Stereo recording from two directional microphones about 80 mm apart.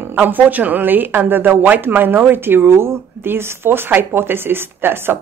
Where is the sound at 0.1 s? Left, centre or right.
Right.